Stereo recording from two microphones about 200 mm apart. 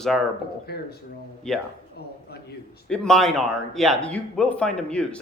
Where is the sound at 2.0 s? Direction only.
55° left (ahead or behind).